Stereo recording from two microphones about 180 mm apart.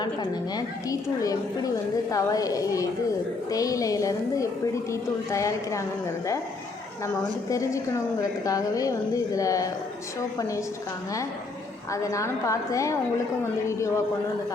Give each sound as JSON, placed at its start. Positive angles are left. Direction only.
{"t": 0.0, "sound": "a woman's voice", "side_deg": 20}
{"t": 7.5, "sound": "a woman's voice", "side_deg": 15}
{"t": 11.9, "sound": "a woman's voice", "side_deg": 15}